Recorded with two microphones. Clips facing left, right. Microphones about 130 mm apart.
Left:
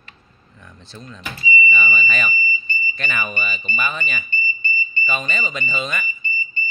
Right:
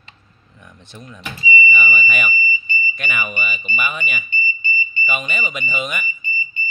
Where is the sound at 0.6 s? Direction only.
15° right (ahead or behind).